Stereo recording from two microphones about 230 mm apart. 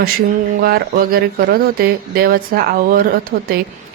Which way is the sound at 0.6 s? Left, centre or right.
Right.